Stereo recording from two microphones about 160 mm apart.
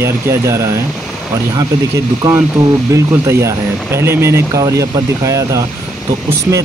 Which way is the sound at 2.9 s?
20° right (ahead or behind).